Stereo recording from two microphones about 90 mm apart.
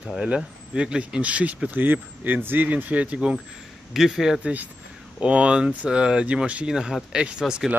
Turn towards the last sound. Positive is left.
turn(degrees=-10)  # may be behind; listen again after turning